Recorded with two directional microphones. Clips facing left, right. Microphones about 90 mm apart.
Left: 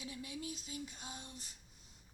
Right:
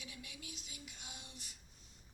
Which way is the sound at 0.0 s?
30° left (ahead or behind).